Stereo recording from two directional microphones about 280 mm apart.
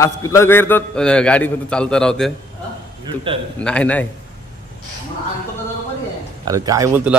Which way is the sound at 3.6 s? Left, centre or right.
Centre.